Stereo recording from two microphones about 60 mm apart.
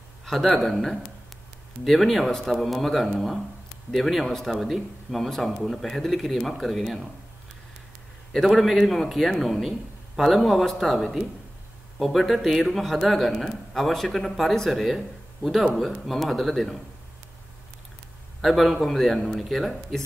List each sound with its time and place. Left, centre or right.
0.2 s a sound: centre
0.6 s a man's voice: centre
8.3 s a man's voice: centre
18.4 s a man's voice: centre